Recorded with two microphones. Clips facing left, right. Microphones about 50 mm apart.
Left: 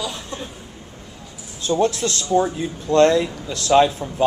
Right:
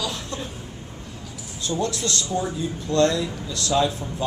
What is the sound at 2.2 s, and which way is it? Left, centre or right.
Speech, left.